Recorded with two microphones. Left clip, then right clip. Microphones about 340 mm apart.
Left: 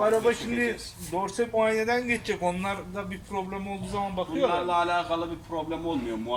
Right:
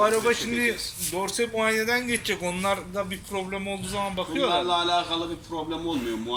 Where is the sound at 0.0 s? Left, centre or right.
Left.